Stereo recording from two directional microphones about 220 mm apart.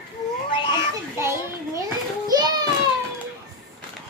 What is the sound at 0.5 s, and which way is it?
Cat, 20° left (ahead or behind).